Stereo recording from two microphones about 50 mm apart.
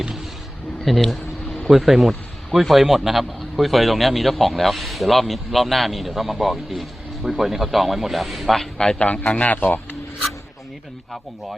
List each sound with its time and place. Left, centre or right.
0.9 s speech: centre
8.8 s a man's voice: centre
9.2 s a man's voice: left